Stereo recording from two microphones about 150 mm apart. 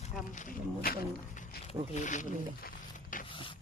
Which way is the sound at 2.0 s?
55° left (ahead or behind).